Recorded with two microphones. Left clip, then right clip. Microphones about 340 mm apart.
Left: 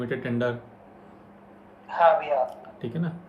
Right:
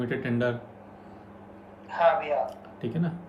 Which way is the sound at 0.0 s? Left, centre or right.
Centre.